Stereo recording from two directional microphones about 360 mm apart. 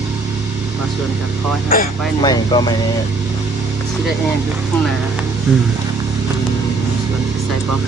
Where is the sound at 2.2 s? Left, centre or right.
Centre.